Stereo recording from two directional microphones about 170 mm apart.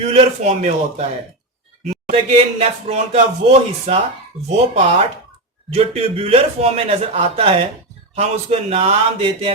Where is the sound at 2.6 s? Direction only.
40° right (ahead or behind).